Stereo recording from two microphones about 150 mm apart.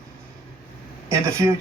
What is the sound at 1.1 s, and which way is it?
Speech, 20° right (ahead or behind).